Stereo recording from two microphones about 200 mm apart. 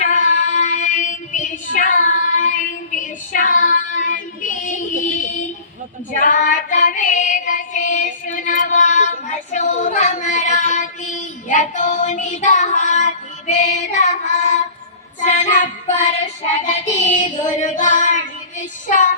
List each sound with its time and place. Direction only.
0.0 s child singing: 35° left (ahead or behind)
6.1 s female singing: 40° left (ahead or behind)
15.2 s child singing: 35° left (ahead or behind)